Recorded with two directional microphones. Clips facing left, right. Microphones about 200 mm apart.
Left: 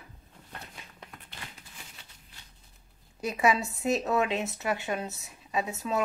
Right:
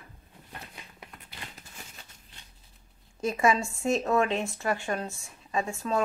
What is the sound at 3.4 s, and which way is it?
A woman's voice, 5° left (ahead or behind).